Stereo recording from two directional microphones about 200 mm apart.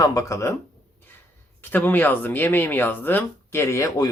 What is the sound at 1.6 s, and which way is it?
Speech, 10° left (ahead or behind).